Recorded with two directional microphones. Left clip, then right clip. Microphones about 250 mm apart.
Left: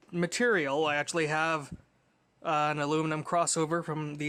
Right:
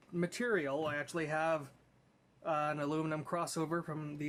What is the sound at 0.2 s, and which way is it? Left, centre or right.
Speech, left.